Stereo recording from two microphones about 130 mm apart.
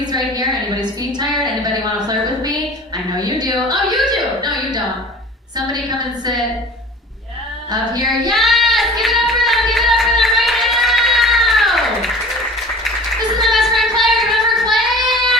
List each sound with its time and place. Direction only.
0.8 s a sound: 35° right (ahead or behind)
8.0 s child singing: centre (ahead or behind)
13.4 s clapping: centre (ahead or behind)
14.0 s child singing: centre (ahead or behind)